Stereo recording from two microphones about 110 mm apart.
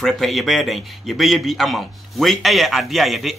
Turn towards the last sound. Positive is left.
turn(degrees=0)  # may be behind; listen again after turning